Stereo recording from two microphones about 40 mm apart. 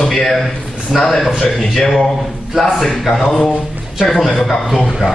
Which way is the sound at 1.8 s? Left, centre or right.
Centre.